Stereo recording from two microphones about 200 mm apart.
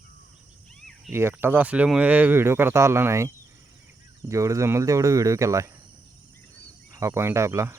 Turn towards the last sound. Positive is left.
turn(degrees=-10)  # may be behind; listen again after turning